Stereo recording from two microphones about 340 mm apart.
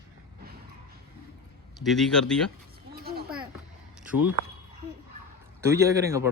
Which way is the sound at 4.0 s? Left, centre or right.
Centre.